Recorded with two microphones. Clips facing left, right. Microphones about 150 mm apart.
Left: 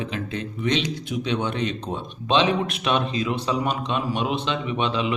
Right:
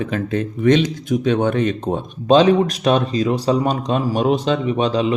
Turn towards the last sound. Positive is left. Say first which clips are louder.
# right 7 dB
turn(degrees=-35)  # may be behind; listen again after turning